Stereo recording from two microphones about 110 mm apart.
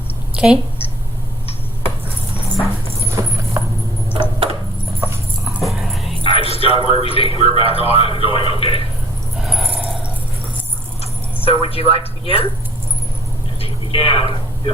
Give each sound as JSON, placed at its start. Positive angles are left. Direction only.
{"t": 0.3, "sound": "speech", "side_deg": -10}
{"t": 3.1, "sound": "clip-clop", "side_deg": -25}
{"t": 4.2, "sound": "a sound", "side_deg": -55}
{"t": 4.9, "sound": "horse", "side_deg": -25}
{"t": 5.5, "sound": "dog", "side_deg": 0}
{"t": 6.2, "sound": "a man's voice", "side_deg": 60}
{"t": 9.4, "sound": "dog", "side_deg": 0}
{"t": 11.4, "sound": "a man's voice", "side_deg": 55}
{"t": 13.6, "sound": "a sound", "side_deg": 55}